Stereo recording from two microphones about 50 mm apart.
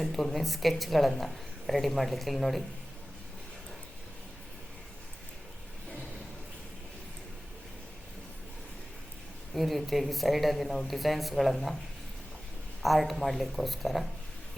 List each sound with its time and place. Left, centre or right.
0.0 s a woman's voice: centre
9.6 s a woman's voice: centre
12.8 s a woman's voice: centre